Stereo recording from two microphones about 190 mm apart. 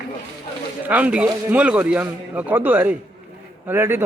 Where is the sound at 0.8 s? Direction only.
5° right (ahead or behind).